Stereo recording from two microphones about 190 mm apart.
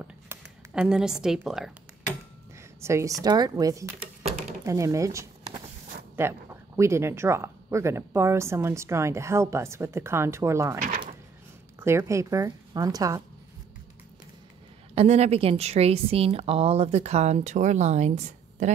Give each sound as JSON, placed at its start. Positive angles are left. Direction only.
{"t": 0.0, "sound": "a sound", "side_deg": -5}
{"t": 2.8, "sound": "speech", "side_deg": -15}
{"t": 11.8, "sound": "speech", "side_deg": -15}
{"t": 15.0, "sound": "a woman's voice", "side_deg": -35}